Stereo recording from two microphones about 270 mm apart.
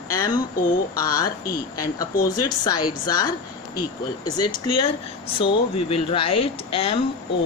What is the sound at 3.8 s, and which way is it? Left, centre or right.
Speech, left.